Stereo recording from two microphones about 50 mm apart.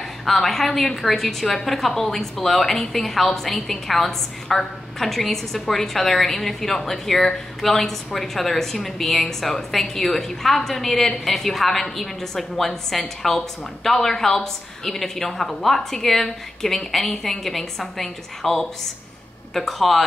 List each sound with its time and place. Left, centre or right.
0.2 s a woman's voice: centre